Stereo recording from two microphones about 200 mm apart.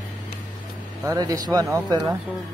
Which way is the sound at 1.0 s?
20° right (ahead or behind).